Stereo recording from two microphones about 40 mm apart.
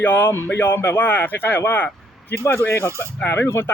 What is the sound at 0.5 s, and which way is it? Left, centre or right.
Speech, left.